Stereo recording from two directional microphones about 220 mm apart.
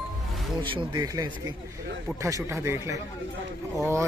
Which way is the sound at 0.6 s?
20° right (ahead or behind).